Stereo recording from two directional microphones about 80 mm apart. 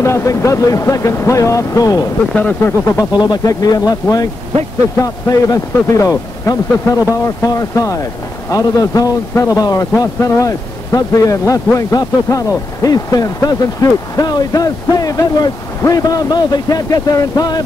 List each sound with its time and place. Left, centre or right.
0.0 s speech: left
2.6 s speech: left
3.1 s speech: left
3.4 s speech: left